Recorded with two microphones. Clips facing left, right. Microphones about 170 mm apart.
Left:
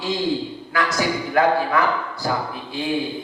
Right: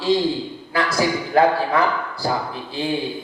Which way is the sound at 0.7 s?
30° right (ahead or behind).